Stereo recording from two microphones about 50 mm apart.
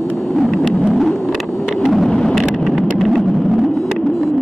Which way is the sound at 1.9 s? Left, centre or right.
Centre.